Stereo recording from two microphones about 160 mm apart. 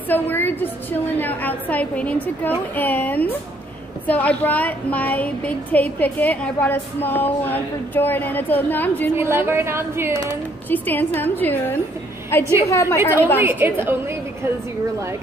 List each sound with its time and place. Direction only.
0.1 s a woman's voice: 10° left (ahead or behind)
9.1 s a woman's voice: 15° right (ahead or behind)
10.7 s a woman's voice: 10° left (ahead or behind)
13.4 s a woman's voice: 10° right (ahead or behind)